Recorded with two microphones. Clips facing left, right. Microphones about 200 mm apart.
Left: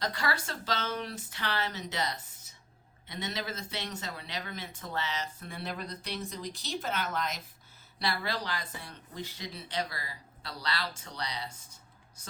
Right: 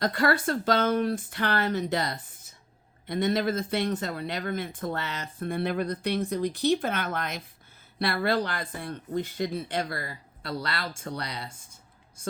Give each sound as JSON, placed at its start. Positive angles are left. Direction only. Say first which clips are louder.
{"t": 0.0, "sound": "speech", "louder": "right 9 dB", "side_deg": -55}